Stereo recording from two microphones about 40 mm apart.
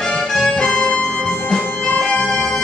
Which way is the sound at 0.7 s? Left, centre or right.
Left.